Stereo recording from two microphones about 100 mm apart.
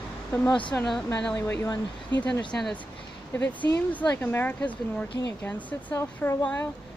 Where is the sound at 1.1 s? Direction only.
15° left (ahead or behind).